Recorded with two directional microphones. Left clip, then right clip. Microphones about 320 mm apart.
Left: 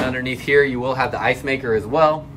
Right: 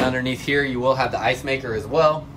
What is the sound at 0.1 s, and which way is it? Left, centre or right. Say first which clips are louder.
Speech: left 4 dB; centre.